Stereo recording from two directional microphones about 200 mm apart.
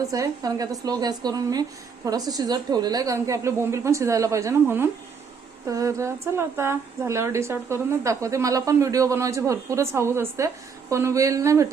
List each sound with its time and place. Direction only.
0.0 s a woman's voice: 15° right (ahead or behind)